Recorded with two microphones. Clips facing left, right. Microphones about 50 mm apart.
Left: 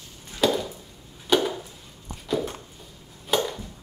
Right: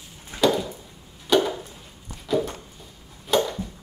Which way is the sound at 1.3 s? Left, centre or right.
Centre.